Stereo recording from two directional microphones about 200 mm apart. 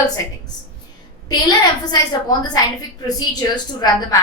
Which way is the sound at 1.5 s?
20° left (ahead or behind).